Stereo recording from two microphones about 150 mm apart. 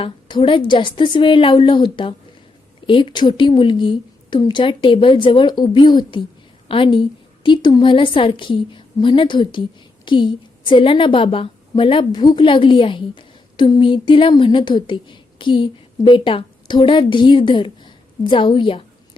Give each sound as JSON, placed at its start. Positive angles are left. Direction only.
{"t": 0.0, "sound": "a woman's voice", "side_deg": 35}